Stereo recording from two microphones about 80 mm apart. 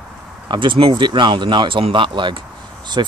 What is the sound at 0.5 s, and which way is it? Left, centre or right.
Speech, right.